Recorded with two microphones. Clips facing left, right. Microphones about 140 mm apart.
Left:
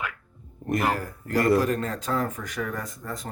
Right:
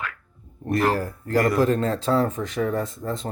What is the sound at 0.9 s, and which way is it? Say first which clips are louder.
A man's voice: right 4 dB; 30° right (ahead or behind).